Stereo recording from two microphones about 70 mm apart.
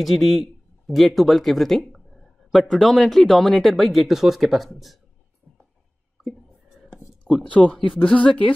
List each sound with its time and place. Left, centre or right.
0.0 s speech: centre
6.2 s whispering: centre
7.5 s speech: centre